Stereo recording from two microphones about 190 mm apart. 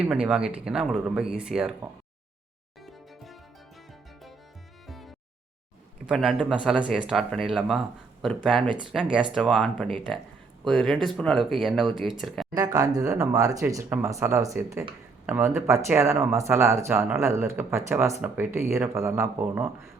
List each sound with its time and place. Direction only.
0.0 s speech: 5° right (ahead or behind)
4.9 s music: centre (ahead or behind)
6.1 s speech: centre (ahead or behind)
12.5 s speech: 20° right (ahead or behind)